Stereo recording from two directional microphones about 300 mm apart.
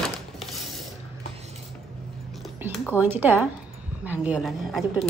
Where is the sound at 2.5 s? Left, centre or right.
Centre.